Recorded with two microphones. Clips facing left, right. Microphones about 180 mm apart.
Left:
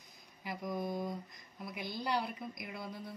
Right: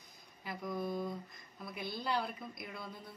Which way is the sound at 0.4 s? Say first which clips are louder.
Left 1 dB; 15° left (ahead or behind).